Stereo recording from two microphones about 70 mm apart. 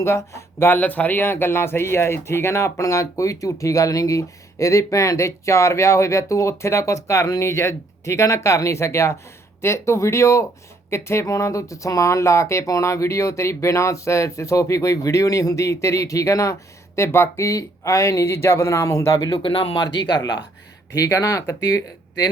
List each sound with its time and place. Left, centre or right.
0.0 s speech: left
0.7 s speech: left
20.9 s speech: left